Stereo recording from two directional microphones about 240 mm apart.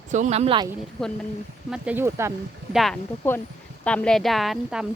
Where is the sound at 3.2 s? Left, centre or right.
Centre.